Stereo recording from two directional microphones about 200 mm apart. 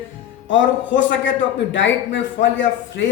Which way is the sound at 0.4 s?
65° left (ahead or behind).